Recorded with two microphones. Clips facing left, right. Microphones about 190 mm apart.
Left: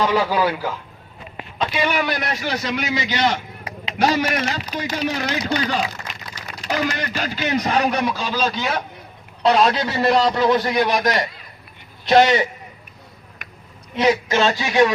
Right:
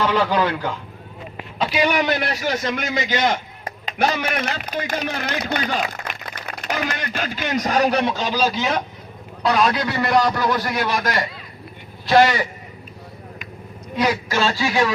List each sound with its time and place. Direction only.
0.0 s speech: 10° left (ahead or behind)
1.5 s a man's voice: 10° right (ahead or behind)
9.4 s a man's voice: 25° left (ahead or behind)
13.9 s a man's voice: 25° left (ahead or behind)